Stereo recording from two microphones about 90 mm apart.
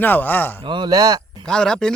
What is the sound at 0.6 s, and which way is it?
Speech, 60° right (ahead or behind).